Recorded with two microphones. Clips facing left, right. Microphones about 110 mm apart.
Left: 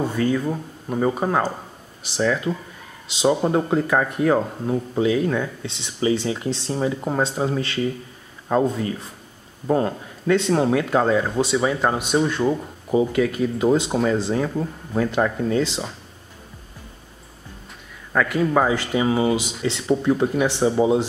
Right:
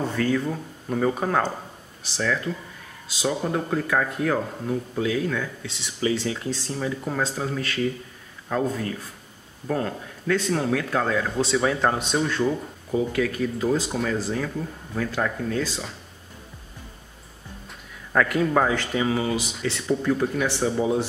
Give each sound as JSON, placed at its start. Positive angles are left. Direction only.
{"t": 0.1, "sound": "speech", "side_deg": 15}
{"t": 12.2, "sound": "speech", "side_deg": 20}
{"t": 18.1, "sound": "speech", "side_deg": 5}